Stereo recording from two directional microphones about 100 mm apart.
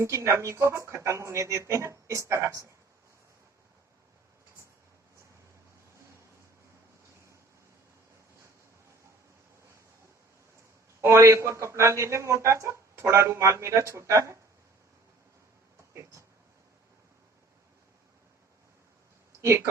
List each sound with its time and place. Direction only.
0.0 s a man's voice: 30° right (ahead or behind)
11.0 s a man's voice: 25° right (ahead or behind)
19.4 s speech: 30° right (ahead or behind)